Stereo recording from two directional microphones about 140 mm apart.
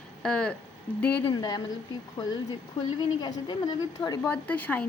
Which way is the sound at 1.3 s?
30° left (ahead or behind).